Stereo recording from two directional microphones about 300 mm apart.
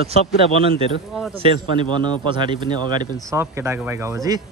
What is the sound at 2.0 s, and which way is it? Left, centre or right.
Speech, centre.